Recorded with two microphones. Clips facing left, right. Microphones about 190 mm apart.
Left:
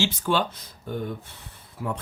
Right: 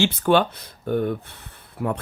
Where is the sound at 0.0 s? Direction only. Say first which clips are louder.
Right 6 dB; 60° right (ahead or behind).